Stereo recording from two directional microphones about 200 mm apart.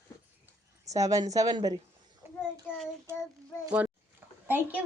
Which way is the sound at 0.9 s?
15° right (ahead or behind).